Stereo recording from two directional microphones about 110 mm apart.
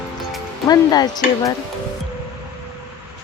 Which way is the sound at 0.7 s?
35° left (ahead or behind).